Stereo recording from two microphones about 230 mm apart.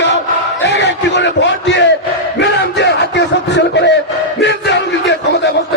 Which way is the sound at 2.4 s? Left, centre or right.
Left.